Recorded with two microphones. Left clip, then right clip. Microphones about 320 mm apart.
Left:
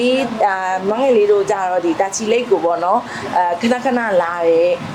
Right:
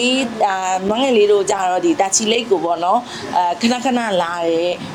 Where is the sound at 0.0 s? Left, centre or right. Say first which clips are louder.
Left 1 dB; right.